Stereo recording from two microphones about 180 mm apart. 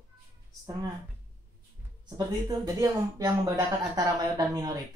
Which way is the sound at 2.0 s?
25° right (ahead or behind).